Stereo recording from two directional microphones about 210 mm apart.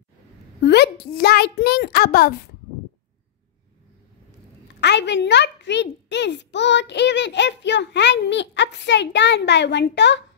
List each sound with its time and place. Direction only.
0.7 s a child's voice: 50° left (ahead or behind)
4.7 s a woman's voice: 55° left (ahead or behind)